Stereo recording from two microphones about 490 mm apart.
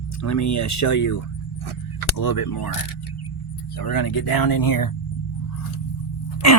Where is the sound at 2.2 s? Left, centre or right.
Left.